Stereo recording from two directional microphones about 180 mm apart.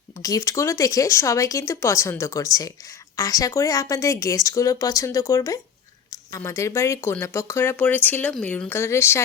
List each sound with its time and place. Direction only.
0.2 s speech: 20° left (ahead or behind)